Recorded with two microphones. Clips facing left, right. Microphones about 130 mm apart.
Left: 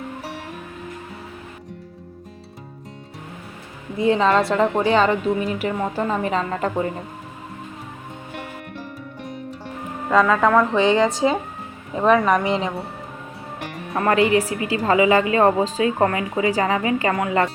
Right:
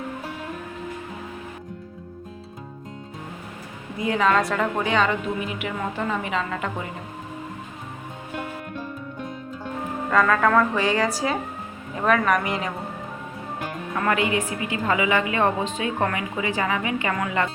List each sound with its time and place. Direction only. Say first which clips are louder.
3.9 s a woman's voice: left 4 dB; 30° left (ahead or behind)
10.1 s a woman's voice: left 3 dB; 15° left (ahead or behind)
13.9 s a woman's voice: left 6 dB; 35° left (ahead or behind)